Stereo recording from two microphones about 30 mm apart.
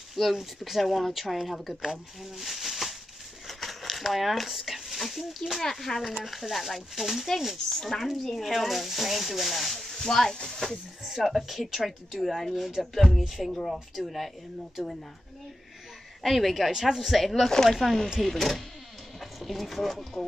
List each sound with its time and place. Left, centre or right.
0.1 s speech: centre
2.3 s a sound: centre
4.9 s speech: centre
5.6 s speech: centre
6.1 s speech: centre
7.7 s speech: centre
8.4 s speech: centre
9.9 s speech: centre
11.1 s speech: centre
16.2 s speech: centre